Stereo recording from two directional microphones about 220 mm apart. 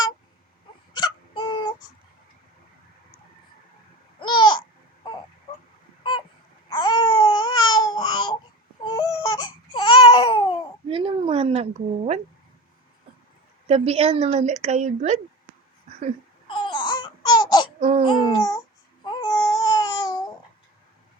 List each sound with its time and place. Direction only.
0.9 s hiccup: 20° left (ahead or behind)
4.2 s babbling: 20° left (ahead or behind)
6.0 s a sound: 20° left (ahead or behind)
6.7 s babbling: 20° left (ahead or behind)
8.8 s a sound: 20° left (ahead or behind)
10.8 s a sound: 25° right (ahead or behind)
13.7 s a woman's voice: 30° right (ahead or behind)
16.5 s baby cry: 20° left (ahead or behind)
17.7 s babbling: 30° right (ahead or behind)
18.1 s babbling: 15° left (ahead or behind)